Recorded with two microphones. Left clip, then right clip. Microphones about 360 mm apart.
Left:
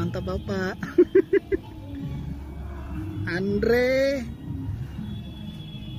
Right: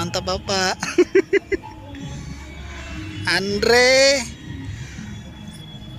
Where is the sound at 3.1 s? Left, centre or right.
Right.